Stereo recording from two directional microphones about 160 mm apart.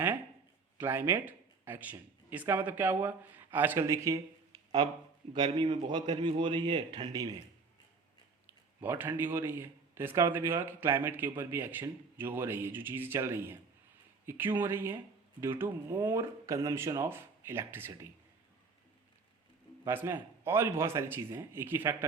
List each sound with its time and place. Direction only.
0.8 s a man's voice: 15° right (ahead or behind)
8.4 s a man's voice: 10° right (ahead or behind)
19.8 s a man's voice: 15° right (ahead or behind)